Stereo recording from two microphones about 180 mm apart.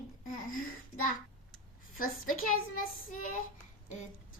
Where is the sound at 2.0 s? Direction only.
50° left (ahead or behind).